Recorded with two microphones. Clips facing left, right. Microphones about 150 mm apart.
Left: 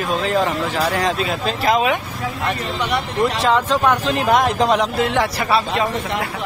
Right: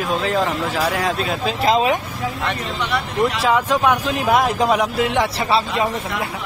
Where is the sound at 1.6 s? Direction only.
30° right (ahead or behind).